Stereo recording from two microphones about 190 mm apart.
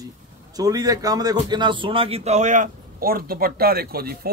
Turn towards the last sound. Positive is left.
turn(degrees=-55)  # may be behind; listen again after turning